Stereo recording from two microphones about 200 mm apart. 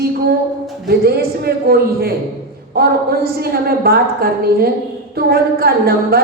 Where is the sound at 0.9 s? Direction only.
50° right (ahead or behind).